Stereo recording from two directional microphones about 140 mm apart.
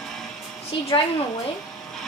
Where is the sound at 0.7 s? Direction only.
40° left (ahead or behind).